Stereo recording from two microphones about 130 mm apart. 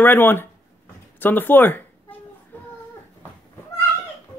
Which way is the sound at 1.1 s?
15° left (ahead or behind).